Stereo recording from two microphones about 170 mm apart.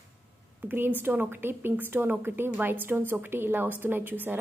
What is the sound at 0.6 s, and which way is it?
A woman's voice, 10° right (ahead or behind).